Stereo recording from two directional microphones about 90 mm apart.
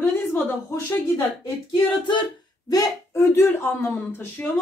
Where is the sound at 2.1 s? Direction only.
60° left (ahead or behind).